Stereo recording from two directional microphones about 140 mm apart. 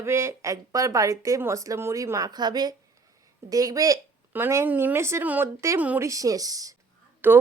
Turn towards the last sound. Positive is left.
turn(degrees=-15)  # may be behind; listen again after turning